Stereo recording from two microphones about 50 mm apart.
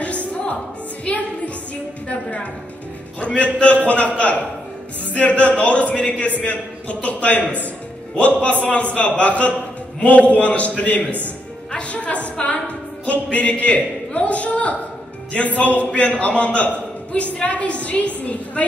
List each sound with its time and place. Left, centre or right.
0.0 s music: left
3.2 s a man's voice: left